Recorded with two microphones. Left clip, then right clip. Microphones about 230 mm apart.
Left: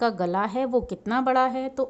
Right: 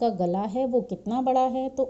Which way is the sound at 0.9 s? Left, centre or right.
Left.